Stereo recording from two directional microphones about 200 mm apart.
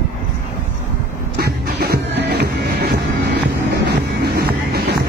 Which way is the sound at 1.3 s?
50° right (ahead or behind).